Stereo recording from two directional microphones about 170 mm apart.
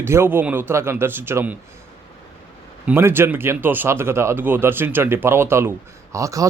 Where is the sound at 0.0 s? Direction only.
15° right (ahead or behind).